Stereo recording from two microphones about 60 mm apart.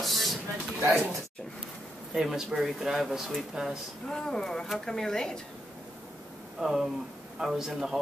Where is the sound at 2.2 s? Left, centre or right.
Centre.